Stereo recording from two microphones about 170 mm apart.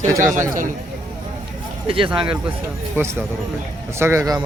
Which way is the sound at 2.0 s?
5° right (ahead or behind).